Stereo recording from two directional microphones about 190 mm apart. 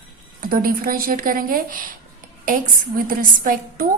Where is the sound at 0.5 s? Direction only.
50° right (ahead or behind).